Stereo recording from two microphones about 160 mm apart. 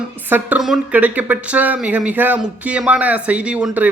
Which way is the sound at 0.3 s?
10° right (ahead or behind).